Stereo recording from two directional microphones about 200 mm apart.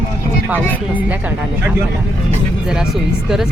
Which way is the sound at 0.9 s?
10° right (ahead or behind).